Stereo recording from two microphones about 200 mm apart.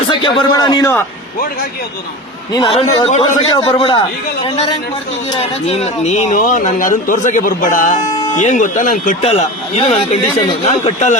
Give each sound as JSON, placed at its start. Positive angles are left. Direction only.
{"t": 0.1, "sound": "a man's voice", "side_deg": 25}
{"t": 2.5, "sound": "a man's voice", "side_deg": 25}
{"t": 5.3, "sound": "speech", "side_deg": 30}
{"t": 8.1, "sound": "a sound", "side_deg": 20}
{"t": 8.4, "sound": "speech", "side_deg": 40}